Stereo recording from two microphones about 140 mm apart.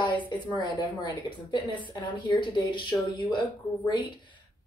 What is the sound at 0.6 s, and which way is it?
A woman's voice, 35° left (ahead or behind).